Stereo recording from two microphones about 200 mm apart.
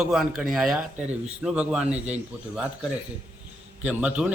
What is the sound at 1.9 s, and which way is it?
Speech, 35° right (ahead or behind).